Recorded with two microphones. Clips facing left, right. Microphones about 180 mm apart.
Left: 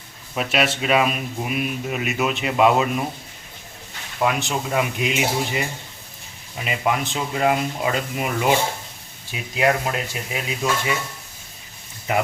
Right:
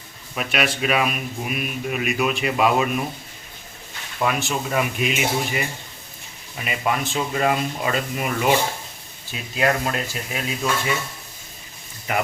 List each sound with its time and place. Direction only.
0.3 s speech: 25° left (ahead or behind)
4.2 s speech: 15° left (ahead or behind)
6.7 s speech: 20° left (ahead or behind)